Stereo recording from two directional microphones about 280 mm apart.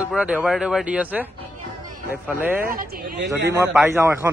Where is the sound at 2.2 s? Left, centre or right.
Centre.